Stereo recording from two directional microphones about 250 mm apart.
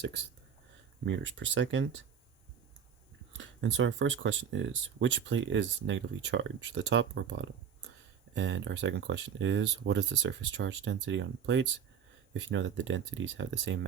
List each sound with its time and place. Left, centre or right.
1.0 s speech: right
3.3 s speech: right